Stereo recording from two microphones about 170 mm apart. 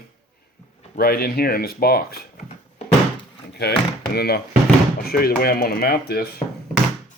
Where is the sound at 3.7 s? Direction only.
75° left (ahead or behind).